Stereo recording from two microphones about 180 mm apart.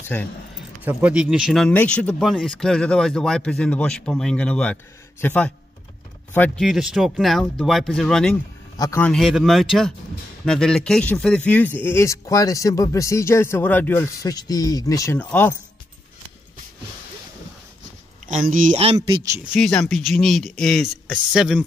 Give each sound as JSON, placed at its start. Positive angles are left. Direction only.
{"t": 0.1, "sound": "speech", "side_deg": 10}
{"t": 0.8, "sound": "speech", "side_deg": -5}
{"t": 8.7, "sound": "a man's voice", "side_deg": 20}
{"t": 9.0, "sound": "speech", "side_deg": 0}
{"t": 18.2, "sound": "speech", "side_deg": -45}
{"t": 18.8, "sound": "speech", "side_deg": -35}
{"t": 19.5, "sound": "speech", "side_deg": 5}